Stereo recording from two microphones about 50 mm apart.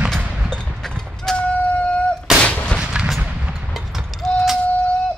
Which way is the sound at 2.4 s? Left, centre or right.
Left.